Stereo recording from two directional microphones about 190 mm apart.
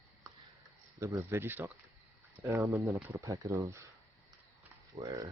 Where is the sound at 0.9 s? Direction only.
15° right (ahead or behind).